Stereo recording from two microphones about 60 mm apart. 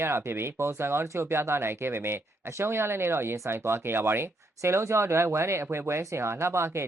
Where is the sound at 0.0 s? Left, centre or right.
Right.